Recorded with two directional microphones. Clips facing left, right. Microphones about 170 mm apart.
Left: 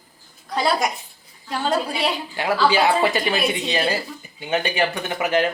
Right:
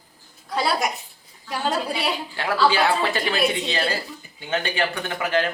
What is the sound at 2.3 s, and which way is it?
Speech, 15° left (ahead or behind).